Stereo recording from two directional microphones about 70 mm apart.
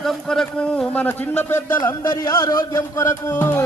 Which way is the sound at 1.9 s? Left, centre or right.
Left.